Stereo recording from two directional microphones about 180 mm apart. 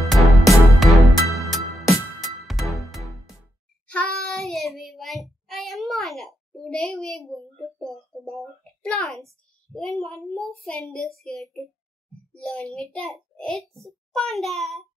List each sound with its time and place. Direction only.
0.0 s music: centre (ahead or behind)
3.8 s child singing: 5° left (ahead or behind)
5.5 s a sound: centre (ahead or behind)
9.8 s a child's voice: centre (ahead or behind)